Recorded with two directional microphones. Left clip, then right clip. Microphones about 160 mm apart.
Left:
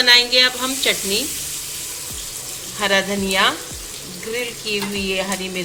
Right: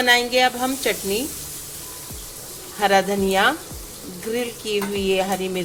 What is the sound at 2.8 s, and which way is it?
Speech, 60° right (ahead or behind).